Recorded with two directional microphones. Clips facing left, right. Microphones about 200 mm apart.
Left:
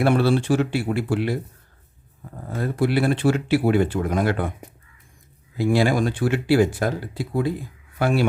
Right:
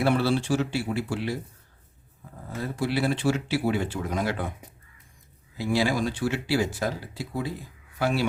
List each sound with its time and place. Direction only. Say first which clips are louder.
0.0 s speech: left 4 dB; 55° left (ahead or behind)
2.6 s speech: left 6 dB; 55° left (ahead or behind)
5.5 s speech: left 5 dB; 55° left (ahead or behind)